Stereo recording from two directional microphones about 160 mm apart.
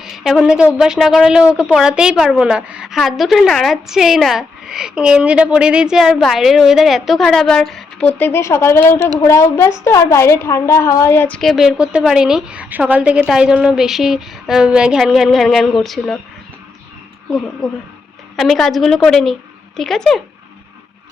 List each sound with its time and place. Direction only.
0.0 s a woman's voice: centre (ahead or behind); by 11.3 s 15° left (ahead or behind)
11.3 s a woman's voice: centre (ahead or behind)
18.3 s a woman's voice: centre (ahead or behind)